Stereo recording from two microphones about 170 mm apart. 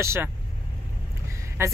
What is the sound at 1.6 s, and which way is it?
Speech, 15° right (ahead or behind).